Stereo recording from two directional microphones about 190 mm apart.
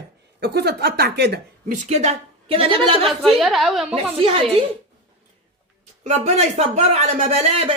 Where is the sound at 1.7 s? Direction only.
40° right (ahead or behind).